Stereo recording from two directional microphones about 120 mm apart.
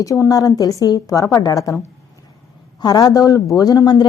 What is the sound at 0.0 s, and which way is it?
A woman's voice, 30° left (ahead or behind).